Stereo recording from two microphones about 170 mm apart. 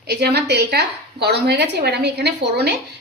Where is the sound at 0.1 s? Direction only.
75° right (ahead or behind).